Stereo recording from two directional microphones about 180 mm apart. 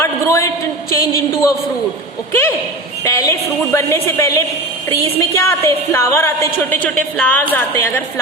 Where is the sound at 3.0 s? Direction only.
15° left (ahead or behind).